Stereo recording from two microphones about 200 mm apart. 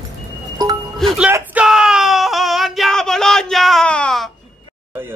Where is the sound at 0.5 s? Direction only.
20° right (ahead or behind).